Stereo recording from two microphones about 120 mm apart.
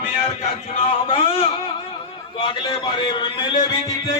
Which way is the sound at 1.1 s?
50° left (ahead or behind).